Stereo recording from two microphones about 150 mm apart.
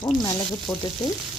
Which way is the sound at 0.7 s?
Centre (ahead or behind).